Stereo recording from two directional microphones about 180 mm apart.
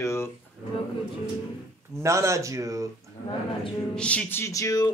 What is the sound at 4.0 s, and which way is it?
Speech, 5° left (ahead or behind).